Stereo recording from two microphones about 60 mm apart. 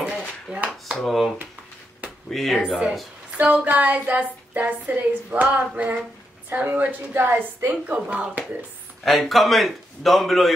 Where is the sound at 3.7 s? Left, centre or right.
Right.